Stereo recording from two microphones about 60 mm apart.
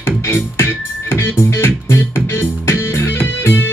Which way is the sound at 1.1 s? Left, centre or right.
Left.